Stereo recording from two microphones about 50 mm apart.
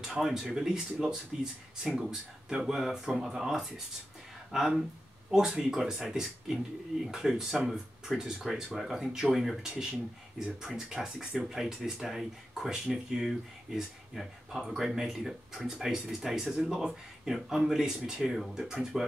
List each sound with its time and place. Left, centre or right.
0.0 s speech: centre